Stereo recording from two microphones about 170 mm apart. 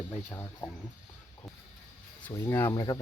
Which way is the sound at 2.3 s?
15° left (ahead or behind).